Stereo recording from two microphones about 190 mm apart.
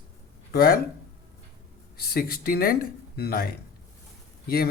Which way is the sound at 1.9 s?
55° left (ahead or behind).